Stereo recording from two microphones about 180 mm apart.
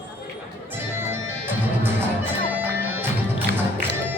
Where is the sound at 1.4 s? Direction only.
10° right (ahead or behind).